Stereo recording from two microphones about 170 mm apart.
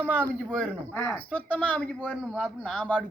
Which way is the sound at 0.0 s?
10° right (ahead or behind).